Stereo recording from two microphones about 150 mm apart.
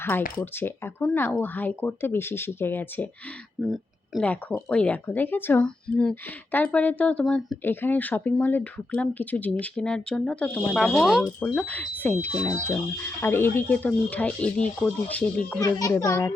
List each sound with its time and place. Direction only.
0.6 s speech: 15° left (ahead or behind)
3.6 s speech: centre (ahead or behind)
4.2 s speech: 10° left (ahead or behind)
15.6 s a child's voice: 25° left (ahead or behind)